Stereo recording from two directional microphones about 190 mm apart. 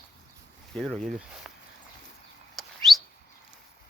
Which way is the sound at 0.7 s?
5° left (ahead or behind).